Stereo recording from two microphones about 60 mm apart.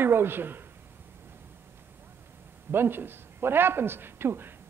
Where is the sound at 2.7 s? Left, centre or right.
Right.